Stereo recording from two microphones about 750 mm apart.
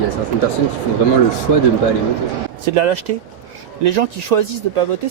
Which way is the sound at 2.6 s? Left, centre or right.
Right.